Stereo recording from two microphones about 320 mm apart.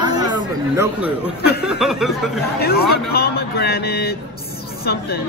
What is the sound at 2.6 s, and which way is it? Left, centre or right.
Speech, left.